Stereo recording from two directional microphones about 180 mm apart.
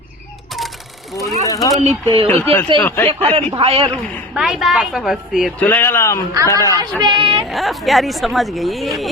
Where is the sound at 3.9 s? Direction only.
10° left (ahead or behind).